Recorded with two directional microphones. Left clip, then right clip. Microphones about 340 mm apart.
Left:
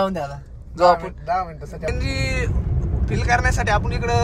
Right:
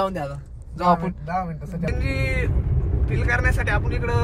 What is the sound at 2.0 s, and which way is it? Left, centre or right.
Speech, centre.